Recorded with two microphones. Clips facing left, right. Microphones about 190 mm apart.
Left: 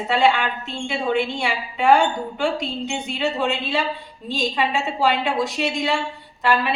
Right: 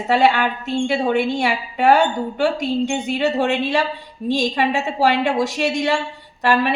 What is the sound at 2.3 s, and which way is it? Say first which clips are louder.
Speech: right 5 dB; 45° right (ahead or behind).